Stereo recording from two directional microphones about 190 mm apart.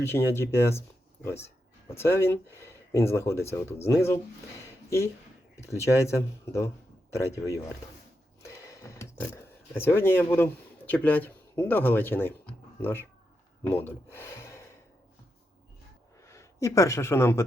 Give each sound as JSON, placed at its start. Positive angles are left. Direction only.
{"t": 0.0, "sound": "speech", "side_deg": 15}
{"t": 8.4, "sound": "a sound", "side_deg": 15}
{"t": 13.7, "sound": "speech", "side_deg": 10}
{"t": 16.2, "sound": "speech", "side_deg": 15}